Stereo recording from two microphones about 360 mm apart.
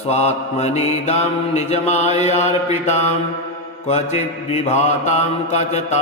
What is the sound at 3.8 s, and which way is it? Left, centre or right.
Mantra, centre.